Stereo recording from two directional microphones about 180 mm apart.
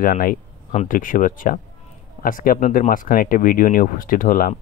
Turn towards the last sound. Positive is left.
turn(degrees=50)  # may be behind; listen again after turning